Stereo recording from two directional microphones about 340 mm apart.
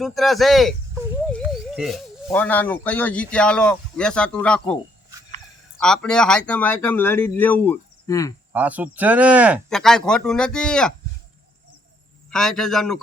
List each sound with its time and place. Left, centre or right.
0.0 s a sound: centre
2.2 s speech: centre
5.8 s speech: centre
8.5 s speech: centre
12.3 s speech: centre